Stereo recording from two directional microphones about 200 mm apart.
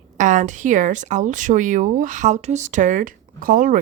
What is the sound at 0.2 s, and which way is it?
Speech, 40° right (ahead or behind).